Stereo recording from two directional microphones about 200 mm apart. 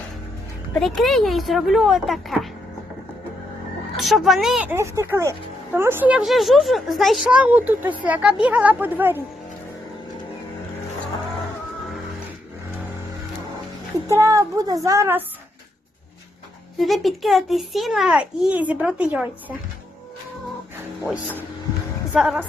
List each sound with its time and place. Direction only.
0.8 s a child's voice: centre (ahead or behind)
3.9 s a child's voice: centre (ahead or behind)
14.1 s a woman's voice: 15° right (ahead or behind)
16.7 s a child's voice: centre (ahead or behind)
21.0 s a woman's voice: 10° right (ahead or behind)